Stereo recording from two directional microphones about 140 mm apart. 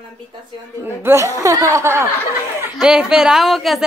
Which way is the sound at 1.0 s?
20° right (ahead or behind).